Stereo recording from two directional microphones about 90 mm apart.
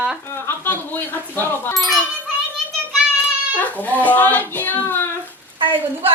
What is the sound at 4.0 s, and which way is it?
Child singing, 20° left (ahead or behind).